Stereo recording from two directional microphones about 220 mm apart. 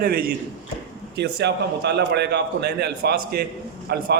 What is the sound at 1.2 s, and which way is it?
A man's voice, 50° right (ahead or behind).